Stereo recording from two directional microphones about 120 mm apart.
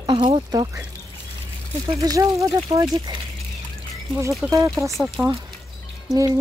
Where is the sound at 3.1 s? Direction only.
40° right (ahead or behind).